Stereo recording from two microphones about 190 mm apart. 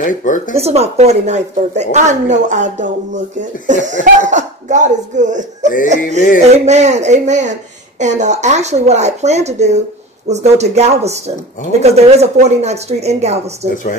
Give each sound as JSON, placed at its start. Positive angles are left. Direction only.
{"t": 0.0, "sound": "speech", "side_deg": 40}
{"t": 0.6, "sound": "a woman's voice", "side_deg": -35}